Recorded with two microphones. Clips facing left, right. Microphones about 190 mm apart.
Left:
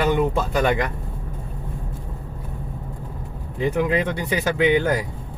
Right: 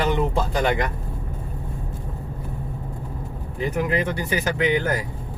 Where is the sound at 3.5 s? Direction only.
20° left (ahead or behind).